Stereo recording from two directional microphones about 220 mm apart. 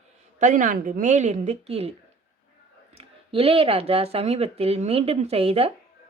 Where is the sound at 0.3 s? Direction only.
35° right (ahead or behind).